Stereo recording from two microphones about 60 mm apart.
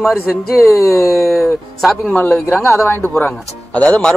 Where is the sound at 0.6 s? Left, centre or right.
Left.